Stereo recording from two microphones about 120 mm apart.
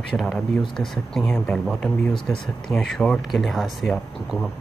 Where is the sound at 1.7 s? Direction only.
Centre (ahead or behind).